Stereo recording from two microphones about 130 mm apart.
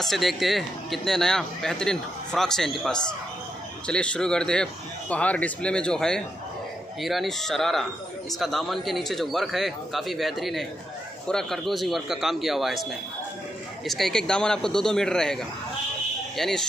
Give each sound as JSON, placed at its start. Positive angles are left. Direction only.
{"t": 0.0, "sound": "speech", "side_deg": 0}
{"t": 13.8, "sound": "speech", "side_deg": 5}